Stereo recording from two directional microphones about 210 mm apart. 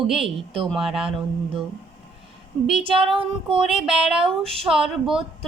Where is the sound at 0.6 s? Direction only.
Centre (ahead or behind).